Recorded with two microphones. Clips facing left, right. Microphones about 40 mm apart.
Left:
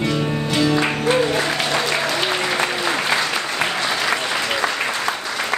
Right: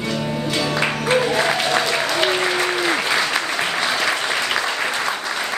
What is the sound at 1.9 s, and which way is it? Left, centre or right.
Applause, centre.